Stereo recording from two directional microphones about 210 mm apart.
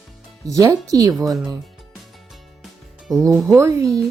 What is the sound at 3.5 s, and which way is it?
Speech, 15° right (ahead or behind).